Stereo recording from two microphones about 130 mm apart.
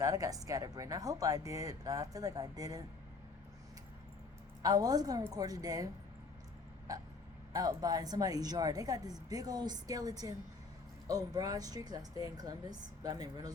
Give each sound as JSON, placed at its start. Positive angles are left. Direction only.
{"t": 0.0, "sound": "a woman's voice", "side_deg": -25}
{"t": 4.6, "sound": "a woman's voice", "side_deg": -30}
{"t": 6.9, "sound": "a woman's voice", "side_deg": -25}